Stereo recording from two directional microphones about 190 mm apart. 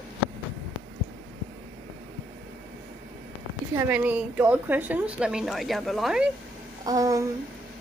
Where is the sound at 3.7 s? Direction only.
10° right (ahead or behind).